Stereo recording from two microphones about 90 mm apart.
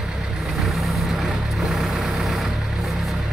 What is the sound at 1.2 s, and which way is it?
Vehicle, centre (ahead or behind).